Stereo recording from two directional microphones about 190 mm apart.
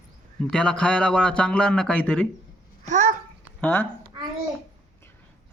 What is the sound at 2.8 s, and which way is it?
Babbling, 40° right (ahead or behind).